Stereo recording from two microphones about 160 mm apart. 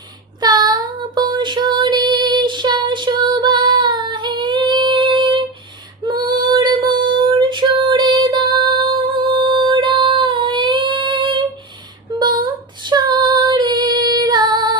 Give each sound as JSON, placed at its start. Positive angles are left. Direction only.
{"t": 0.3, "sound": "child singing", "side_deg": -25}
{"t": 6.1, "sound": "female singing", "side_deg": -25}